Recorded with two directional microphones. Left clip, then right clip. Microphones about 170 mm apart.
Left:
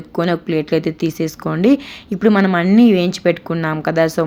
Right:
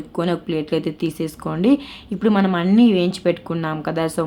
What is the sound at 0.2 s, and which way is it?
Speech, 15° left (ahead or behind).